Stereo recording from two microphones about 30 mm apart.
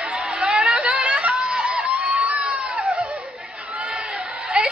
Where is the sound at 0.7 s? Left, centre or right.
Right.